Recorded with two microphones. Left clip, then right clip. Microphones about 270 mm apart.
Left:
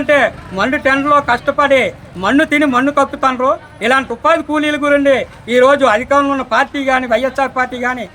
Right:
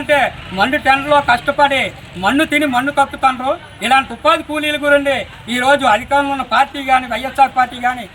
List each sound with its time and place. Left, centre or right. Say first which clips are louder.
0.6 s a man's voice: even; left